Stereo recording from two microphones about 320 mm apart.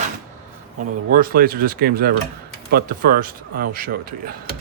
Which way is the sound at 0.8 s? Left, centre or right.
Right.